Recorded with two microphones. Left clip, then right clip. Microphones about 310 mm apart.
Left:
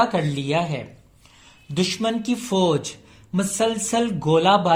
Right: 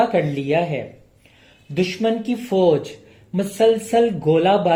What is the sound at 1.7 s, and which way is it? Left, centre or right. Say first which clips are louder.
Speech: right 3 dB; left.